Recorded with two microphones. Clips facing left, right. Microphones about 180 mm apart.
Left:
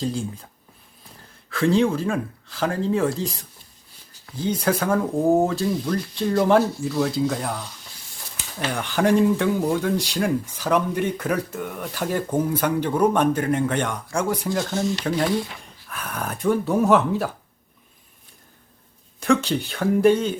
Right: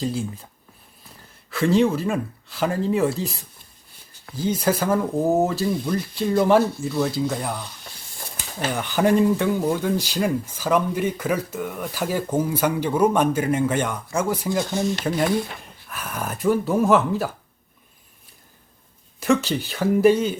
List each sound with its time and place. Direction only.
0.0 s speech: 5° right (ahead or behind)
1.5 s speech: 5° right (ahead or behind)
4.4 s speech: 5° right (ahead or behind)
8.7 s speech: 5° right (ahead or behind)
19.2 s speech: centre (ahead or behind)